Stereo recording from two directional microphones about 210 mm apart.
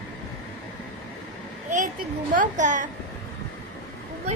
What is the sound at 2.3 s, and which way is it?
Speech, 40° right (ahead or behind).